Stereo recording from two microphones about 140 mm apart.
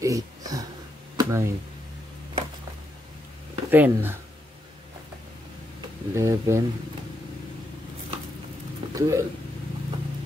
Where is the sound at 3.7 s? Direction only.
15° right (ahead or behind).